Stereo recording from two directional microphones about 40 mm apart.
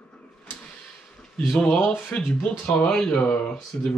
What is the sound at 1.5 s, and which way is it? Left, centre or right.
Speech, centre.